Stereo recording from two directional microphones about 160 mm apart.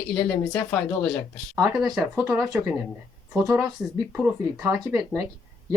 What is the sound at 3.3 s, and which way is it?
Speech, 15° right (ahead or behind).